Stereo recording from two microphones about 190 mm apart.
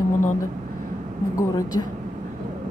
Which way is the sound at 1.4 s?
20° left (ahead or behind).